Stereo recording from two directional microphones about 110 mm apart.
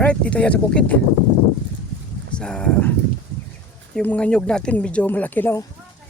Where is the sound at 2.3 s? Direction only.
10° left (ahead or behind).